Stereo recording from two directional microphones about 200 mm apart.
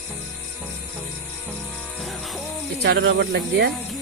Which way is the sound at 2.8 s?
55° right (ahead or behind).